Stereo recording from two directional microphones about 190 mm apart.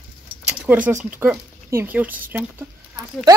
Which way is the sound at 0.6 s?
10° right (ahead or behind).